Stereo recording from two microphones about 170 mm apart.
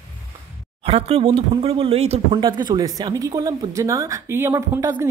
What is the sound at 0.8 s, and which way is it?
A man's voice, 35° right (ahead or behind).